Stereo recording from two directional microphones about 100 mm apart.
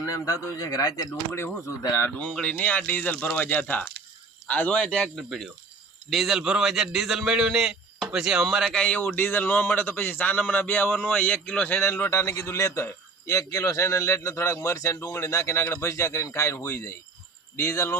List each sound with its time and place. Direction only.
0.0 s speech: 35° left (ahead or behind)
1.6 s a man's voice: 30° left (ahead or behind)
2.1 s a man's voice: 10° left (ahead or behind)
8.8 s a man's voice: 15° left (ahead or behind)
11.8 s a man's voice: 25° left (ahead or behind)